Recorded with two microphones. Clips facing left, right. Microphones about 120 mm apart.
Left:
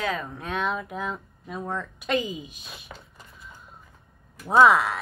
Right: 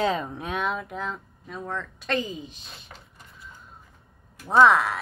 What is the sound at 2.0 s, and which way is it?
Speech, 15° left (ahead or behind).